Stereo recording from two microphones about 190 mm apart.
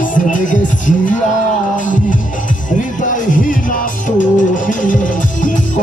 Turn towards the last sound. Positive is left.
turn(degrees=45)  # may be behind; listen again after turning